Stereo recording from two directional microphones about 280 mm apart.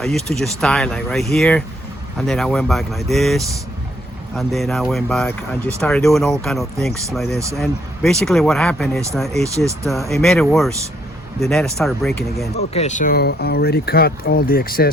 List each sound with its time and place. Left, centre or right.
0.0 s speech: centre
12.7 s speech: left